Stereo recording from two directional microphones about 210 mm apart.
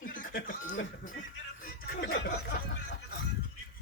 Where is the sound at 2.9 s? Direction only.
55° left (ahead or behind).